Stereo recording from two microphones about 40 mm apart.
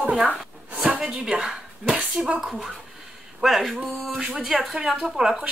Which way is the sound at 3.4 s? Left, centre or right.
Centre.